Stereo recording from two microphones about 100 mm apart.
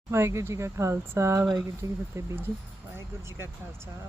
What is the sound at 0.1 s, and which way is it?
Speech, 25° right (ahead or behind).